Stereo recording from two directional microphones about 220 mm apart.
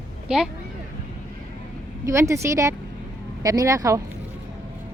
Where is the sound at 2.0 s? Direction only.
15° right (ahead or behind).